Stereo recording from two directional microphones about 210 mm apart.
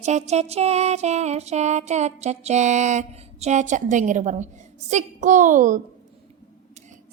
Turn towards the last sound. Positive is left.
turn(degrees=-35)  # may be behind; listen again after turning